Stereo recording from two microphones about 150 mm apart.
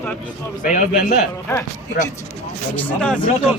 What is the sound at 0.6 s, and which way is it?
Speech, 65° left (ahead or behind).